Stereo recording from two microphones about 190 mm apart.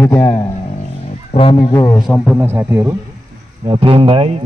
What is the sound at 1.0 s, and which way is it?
Speech, 30° left (ahead or behind).